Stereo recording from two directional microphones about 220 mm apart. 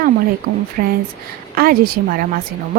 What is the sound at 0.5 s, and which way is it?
Speech, 50° right (ahead or behind).